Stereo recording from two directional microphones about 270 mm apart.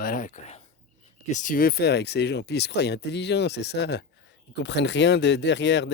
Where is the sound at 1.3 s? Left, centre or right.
Left.